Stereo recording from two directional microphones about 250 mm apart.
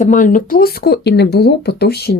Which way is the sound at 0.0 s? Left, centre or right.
Left.